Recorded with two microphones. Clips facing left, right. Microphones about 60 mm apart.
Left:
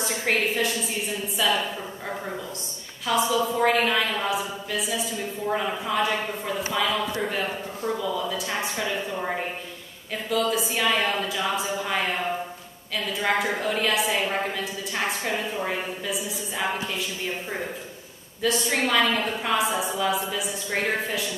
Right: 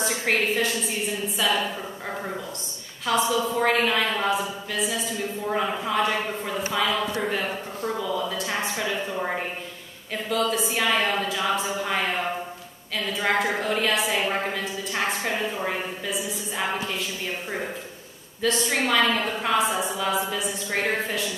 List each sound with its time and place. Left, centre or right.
0.0 s a woman's voice: centre
3.1 s speech: centre
10.3 s speech: centre
13.1 s speech: centre
14.1 s a woman's voice: centre
14.5 s speech: centre
18.4 s speech: centre